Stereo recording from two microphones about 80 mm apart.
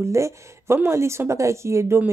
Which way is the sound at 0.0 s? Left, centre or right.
Right.